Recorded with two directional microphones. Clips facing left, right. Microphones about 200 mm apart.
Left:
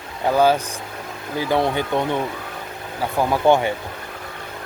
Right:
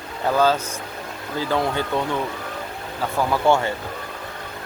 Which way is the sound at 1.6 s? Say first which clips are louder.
Left 2 dB; 20° left (ahead or behind).